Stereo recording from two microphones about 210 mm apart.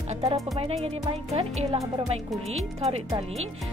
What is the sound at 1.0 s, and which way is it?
Speech, 30° right (ahead or behind).